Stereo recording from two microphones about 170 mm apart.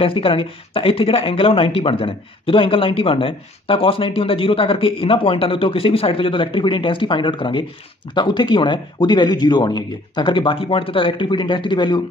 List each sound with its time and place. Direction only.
0.0 s speech: 30° left (ahead or behind)